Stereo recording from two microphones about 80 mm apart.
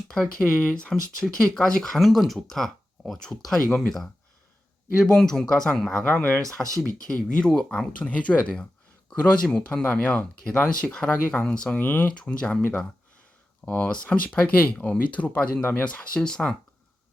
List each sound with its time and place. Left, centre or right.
0.1 s speech: centre
5.1 s speech: centre
6.1 s speech: centre
11.8 s speech: left
13.7 s speech: centre